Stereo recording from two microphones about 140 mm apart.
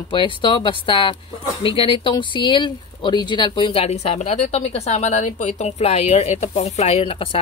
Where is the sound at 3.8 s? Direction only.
50° left (ahead or behind).